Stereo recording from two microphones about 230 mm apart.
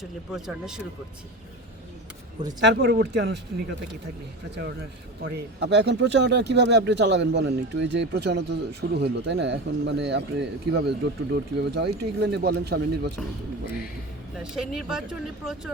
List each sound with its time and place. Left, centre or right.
0.0 s speech: centre
2.6 s speech: right
5.2 s speech: right
14.3 s speech: centre